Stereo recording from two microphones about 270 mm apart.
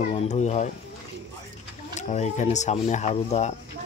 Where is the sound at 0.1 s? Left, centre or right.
Left.